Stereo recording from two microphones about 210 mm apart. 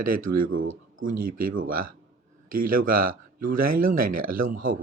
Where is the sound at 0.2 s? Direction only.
40° right (ahead or behind).